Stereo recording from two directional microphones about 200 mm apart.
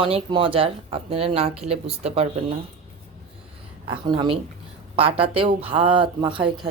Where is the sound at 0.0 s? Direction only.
25° right (ahead or behind).